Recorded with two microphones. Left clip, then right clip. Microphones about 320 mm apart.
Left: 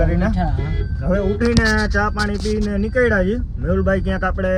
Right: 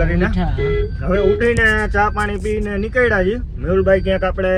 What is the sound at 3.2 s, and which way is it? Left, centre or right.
A man's voice, right.